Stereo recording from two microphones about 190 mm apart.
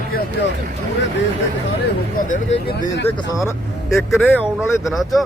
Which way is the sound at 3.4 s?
15° left (ahead or behind).